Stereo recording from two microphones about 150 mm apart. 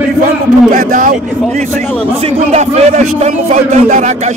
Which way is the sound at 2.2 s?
45° right (ahead or behind).